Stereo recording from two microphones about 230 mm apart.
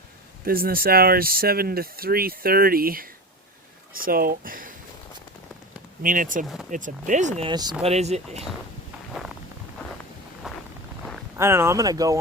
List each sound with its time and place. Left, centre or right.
0.4 s speech: right
6.0 s speech: right
6.4 s speech: centre
6.7 s speech: right
10.4 s a sound: centre
11.3 s speech: centre